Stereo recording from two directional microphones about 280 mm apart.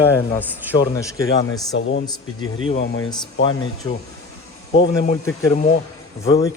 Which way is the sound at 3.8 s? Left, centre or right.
Centre.